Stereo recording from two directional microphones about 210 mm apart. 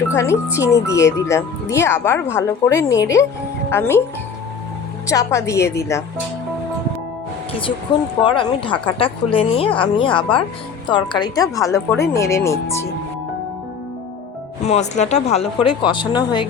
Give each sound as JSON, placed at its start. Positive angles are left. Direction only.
{"t": 0.1, "sound": "a woman's voice", "side_deg": 15}
{"t": 5.0, "sound": "a woman's voice", "side_deg": 15}
{"t": 8.2, "sound": "a woman's voice", "side_deg": 25}
{"t": 14.6, "sound": "speech", "side_deg": 30}